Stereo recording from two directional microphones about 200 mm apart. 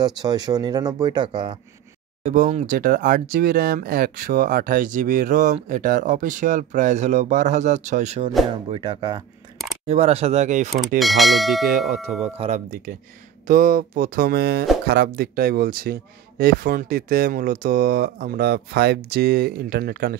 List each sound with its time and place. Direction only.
0.2 s speech: 20° right (ahead or behind)
2.2 s speech: 35° right (ahead or behind)
8.6 s speech: 25° right (ahead or behind)
11.0 s speech: centre (ahead or behind)
12.2 s speech: 35° right (ahead or behind); by 20.2 s 50° right (ahead or behind)